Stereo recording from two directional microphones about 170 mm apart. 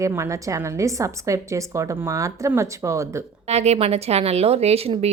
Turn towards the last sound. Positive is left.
turn(degrees=-35)  # may be behind; listen again after turning